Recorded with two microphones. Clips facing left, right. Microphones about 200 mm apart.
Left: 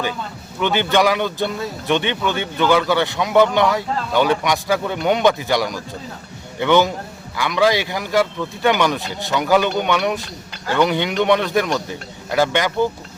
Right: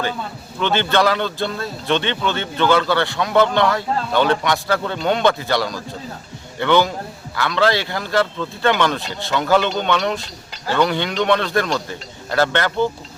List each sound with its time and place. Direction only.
0.6 s speech: 15° left (ahead or behind)